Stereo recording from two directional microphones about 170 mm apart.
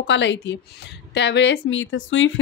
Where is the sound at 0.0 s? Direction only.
90° left.